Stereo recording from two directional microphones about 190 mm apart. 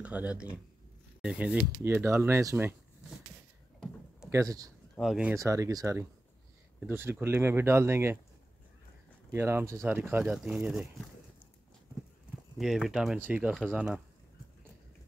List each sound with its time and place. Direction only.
0.0 s speech: 5° right (ahead or behind)
4.3 s speech: 15° right (ahead or behind)
4.9 s speech: centre (ahead or behind)
5.3 s speech: 15° right (ahead or behind)
9.3 s speech: 10° right (ahead or behind)
12.5 s speech: centre (ahead or behind)